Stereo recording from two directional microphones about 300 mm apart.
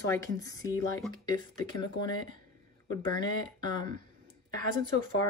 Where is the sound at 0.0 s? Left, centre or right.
Centre.